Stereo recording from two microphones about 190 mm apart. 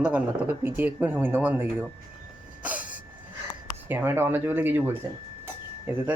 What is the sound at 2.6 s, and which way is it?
Cough, 10° right (ahead or behind).